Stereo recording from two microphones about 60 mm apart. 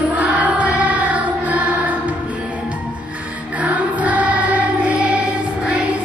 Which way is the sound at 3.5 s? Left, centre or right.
Right.